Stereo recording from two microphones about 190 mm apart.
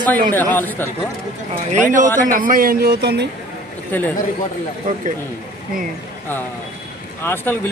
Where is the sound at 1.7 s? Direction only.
40° right (ahead or behind); by 3.3 s 60° right (ahead or behind).